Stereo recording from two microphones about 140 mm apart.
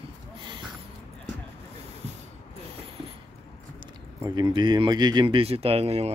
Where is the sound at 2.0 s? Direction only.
50° right (ahead or behind).